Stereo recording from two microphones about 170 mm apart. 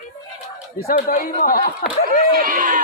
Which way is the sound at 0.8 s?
55° left (ahead or behind).